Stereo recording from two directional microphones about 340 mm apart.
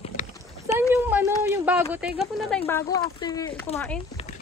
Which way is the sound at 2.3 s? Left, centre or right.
Centre.